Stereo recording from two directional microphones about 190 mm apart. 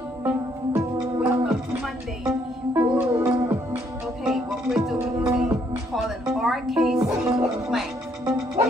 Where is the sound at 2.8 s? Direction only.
15° right (ahead or behind).